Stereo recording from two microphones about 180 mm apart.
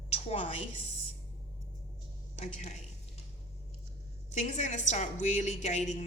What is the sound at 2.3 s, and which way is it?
Speech, 40° left (ahead or behind).